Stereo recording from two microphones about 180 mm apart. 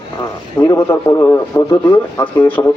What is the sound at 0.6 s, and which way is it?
A man's voice, 15° left (ahead or behind).